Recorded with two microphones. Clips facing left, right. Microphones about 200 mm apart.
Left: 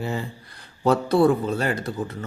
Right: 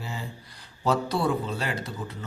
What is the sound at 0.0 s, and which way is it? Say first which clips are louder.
Speech: left 8 dB; 60° left (ahead or behind).